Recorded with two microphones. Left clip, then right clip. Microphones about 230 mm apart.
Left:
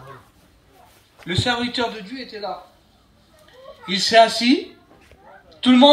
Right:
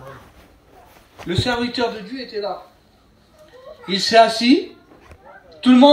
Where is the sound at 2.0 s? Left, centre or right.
Left.